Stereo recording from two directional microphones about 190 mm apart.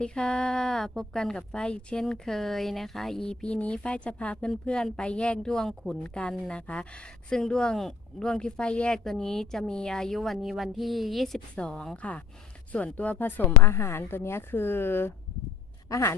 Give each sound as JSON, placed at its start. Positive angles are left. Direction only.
{"t": 0.0, "sound": "a woman's voice", "side_deg": 5}